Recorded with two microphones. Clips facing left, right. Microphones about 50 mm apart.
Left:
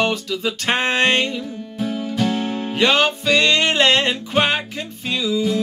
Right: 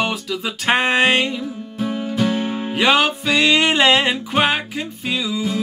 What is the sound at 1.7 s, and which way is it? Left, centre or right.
Music, centre.